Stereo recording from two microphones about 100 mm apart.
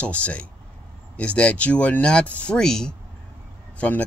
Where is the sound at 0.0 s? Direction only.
15° left (ahead or behind).